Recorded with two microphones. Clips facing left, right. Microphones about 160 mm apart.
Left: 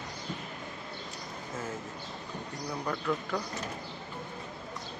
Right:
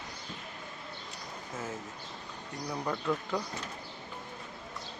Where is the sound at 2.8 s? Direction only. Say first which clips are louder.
Even; 15° right (ahead or behind).